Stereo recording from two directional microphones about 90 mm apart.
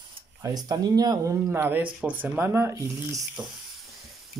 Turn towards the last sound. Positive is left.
turn(degrees=-35)  # may be behind; listen again after turning